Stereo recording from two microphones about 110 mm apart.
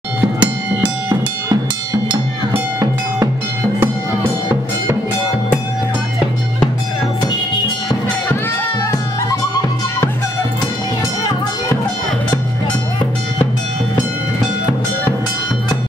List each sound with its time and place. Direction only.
0.4 s music: 10° right (ahead or behind)
9.3 s music: 30° left (ahead or behind)